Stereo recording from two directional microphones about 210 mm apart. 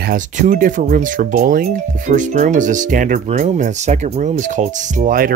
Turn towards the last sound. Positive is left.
turn(degrees=-40)  # may be behind; listen again after turning